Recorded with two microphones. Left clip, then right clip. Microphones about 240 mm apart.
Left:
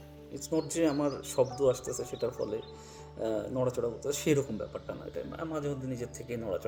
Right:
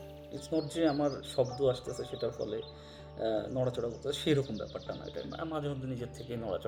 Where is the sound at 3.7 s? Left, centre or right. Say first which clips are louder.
Left 2 dB; left.